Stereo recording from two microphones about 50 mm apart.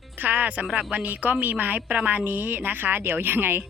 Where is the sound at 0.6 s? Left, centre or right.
Centre.